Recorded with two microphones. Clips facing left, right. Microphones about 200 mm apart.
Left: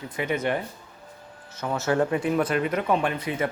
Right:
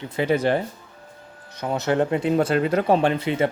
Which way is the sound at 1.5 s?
20° right (ahead or behind).